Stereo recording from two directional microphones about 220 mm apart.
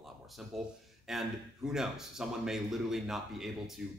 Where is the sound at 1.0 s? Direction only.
Centre (ahead or behind).